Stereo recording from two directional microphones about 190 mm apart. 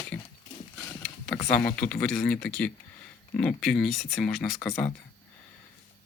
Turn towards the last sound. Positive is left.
turn(degrees=5)  # may be behind; listen again after turning